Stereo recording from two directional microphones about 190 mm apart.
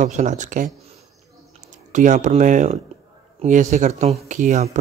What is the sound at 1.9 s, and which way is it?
Speech, 40° right (ahead or behind).